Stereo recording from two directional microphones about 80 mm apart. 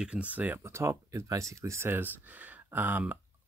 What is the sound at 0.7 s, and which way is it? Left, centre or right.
Speech, right.